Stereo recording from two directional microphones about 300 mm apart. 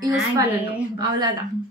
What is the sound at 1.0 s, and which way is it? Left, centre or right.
Speech, centre.